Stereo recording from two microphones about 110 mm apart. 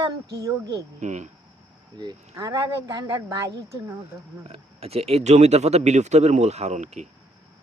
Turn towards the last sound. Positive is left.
turn(degrees=-90)